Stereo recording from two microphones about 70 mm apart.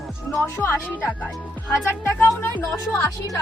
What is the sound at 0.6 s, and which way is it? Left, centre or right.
A woman's voice, left.